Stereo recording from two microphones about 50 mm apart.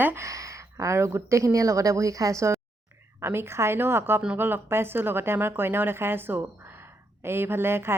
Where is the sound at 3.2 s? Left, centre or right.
Right.